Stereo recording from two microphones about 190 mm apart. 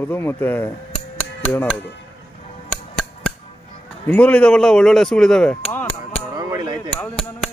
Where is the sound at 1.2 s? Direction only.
5° left (ahead or behind).